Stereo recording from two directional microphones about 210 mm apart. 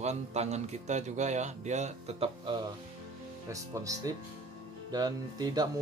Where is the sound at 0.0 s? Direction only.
30° right (ahead or behind).